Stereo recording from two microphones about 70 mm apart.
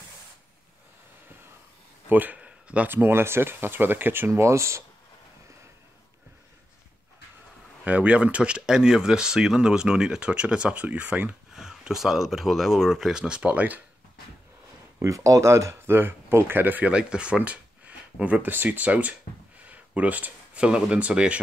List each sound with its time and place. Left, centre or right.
2.0 s a sound: right
2.9 s speech: right
7.8 s speech: centre
11.5 s speech: centre; by 13.8 s right
15.0 s speech: right; by 21.4 s centre